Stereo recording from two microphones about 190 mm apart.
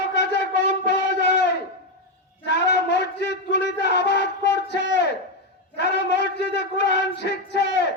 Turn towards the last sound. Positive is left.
turn(degrees=65)  # may be behind; listen again after turning